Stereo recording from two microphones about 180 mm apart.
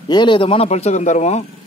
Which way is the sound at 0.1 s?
25° left (ahead or behind).